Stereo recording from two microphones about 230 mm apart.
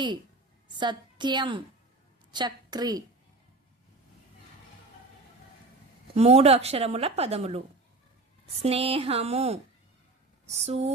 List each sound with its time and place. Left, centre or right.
0.8 s a woman's voice: centre
6.1 s a woman's voice: right
8.6 s a woman's voice: right